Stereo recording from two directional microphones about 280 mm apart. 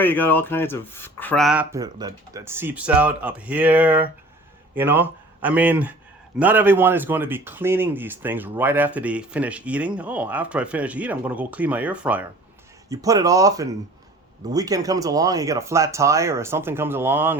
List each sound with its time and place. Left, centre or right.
0.0 s a man's voice: centre